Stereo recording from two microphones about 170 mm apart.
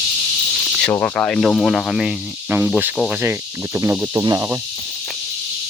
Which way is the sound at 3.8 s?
20° right (ahead or behind).